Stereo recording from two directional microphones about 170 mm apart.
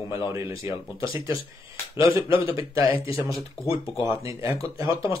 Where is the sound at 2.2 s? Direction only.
30° left (ahead or behind).